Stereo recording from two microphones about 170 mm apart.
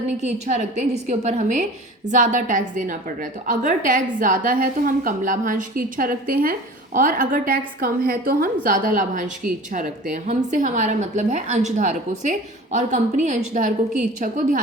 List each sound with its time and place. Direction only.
0.2 s a woman's voice: 40° right (ahead or behind)